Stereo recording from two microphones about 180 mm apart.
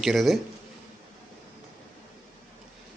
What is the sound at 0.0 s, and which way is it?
Speech, centre (ahead or behind).